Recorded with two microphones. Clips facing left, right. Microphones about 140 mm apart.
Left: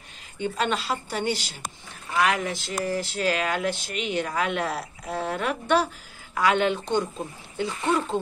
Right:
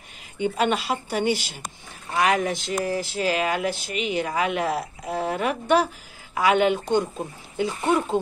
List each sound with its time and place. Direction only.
0.4 s speech: 15° right (ahead or behind)
2.1 s speech: 25° right (ahead or behind)